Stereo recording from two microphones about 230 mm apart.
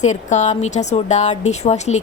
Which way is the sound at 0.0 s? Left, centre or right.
Left.